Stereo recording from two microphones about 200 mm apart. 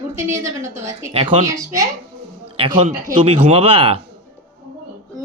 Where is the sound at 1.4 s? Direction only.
15° right (ahead or behind).